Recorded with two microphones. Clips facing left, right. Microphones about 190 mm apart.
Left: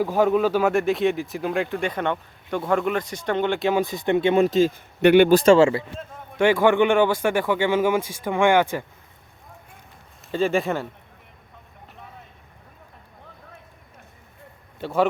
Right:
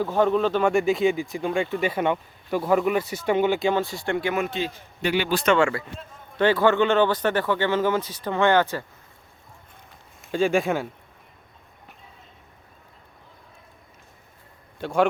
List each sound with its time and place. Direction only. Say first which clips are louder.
0.0 s speech: left 2 dB; 10° left (ahead or behind)
3.8 s speech: left 4 dB; 20° left (ahead or behind); by 4.7 s 40° left (ahead or behind)
5.0 s speech: left 11 dB; 55° left (ahead or behind)
5.3 s speech: left 6 dB; 30° left (ahead or behind)
6.4 s speech: left 2 dB; 15° left (ahead or behind)
10.2 s speech: even; centre (ahead or behind)
14.8 s speech: even; 5° left (ahead or behind)